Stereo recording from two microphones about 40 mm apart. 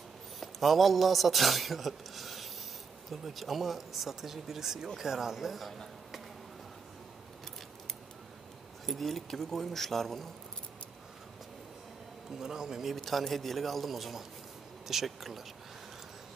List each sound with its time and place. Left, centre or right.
0.4 s speech: centre
8.8 s speech: centre
12.3 s speech: centre
12.9 s a man's voice: centre